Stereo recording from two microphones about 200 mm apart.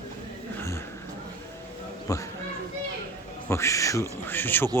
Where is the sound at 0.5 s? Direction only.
15° left (ahead or behind).